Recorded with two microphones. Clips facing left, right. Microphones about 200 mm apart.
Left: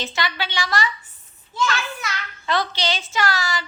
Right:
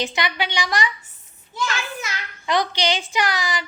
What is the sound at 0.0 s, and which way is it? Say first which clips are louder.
A woman's voice: right 2 dB; 20° right (ahead or behind).